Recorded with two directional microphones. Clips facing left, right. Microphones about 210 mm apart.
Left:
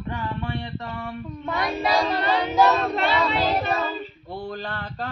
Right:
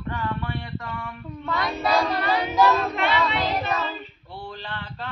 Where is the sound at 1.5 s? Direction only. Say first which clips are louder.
Even; 20° left (ahead or behind); by 3.8 s 35° left (ahead or behind).